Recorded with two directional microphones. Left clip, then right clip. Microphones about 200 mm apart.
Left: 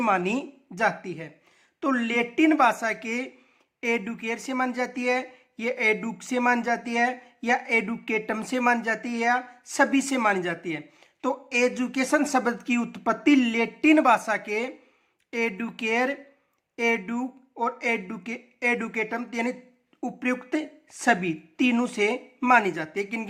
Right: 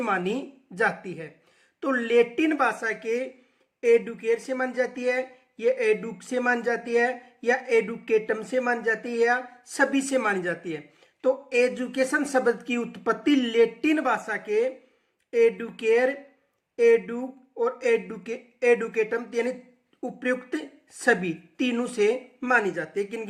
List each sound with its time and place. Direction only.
0.0 s a woman's voice: 30° left (ahead or behind)